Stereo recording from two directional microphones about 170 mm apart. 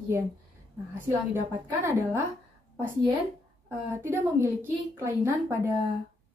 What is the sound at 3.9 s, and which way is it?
A woman's voice, 15° right (ahead or behind).